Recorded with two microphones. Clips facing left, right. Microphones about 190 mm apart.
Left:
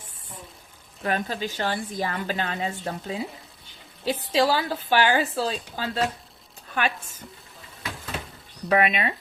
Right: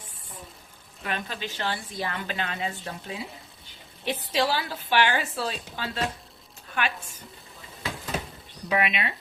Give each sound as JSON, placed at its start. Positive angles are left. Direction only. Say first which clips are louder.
{"t": 1.0, "sound": "a woman's voice", "louder": "left 6 dB", "side_deg": 40}
{"t": 8.7, "sound": "speech", "louder": "left 5 dB", "side_deg": 45}